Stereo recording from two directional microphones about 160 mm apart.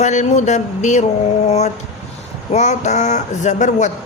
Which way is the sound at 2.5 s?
45° left (ahead or behind).